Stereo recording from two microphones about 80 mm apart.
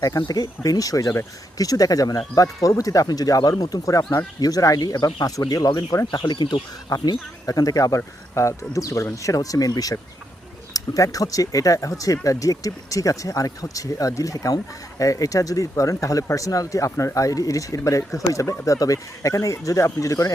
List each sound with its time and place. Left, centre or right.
0.3 s speech: left
6.2 s speech: left
6.9 s speech: left